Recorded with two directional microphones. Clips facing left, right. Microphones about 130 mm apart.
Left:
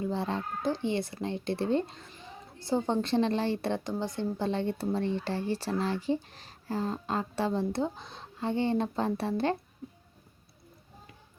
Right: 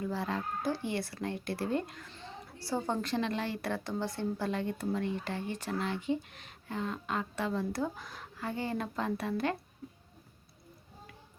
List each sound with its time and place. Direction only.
0.0 s speech: 25° left (ahead or behind)
2.0 s a woman's voice: 15° left (ahead or behind); by 9.6 s 30° left (ahead or behind)